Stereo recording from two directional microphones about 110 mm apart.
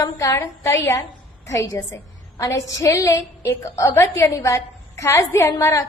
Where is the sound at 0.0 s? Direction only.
25° left (ahead or behind).